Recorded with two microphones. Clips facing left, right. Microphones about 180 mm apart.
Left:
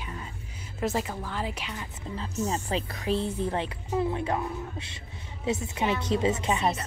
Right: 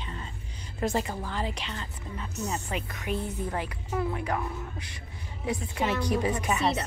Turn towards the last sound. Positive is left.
turn(degrees=25)  # may be behind; listen again after turning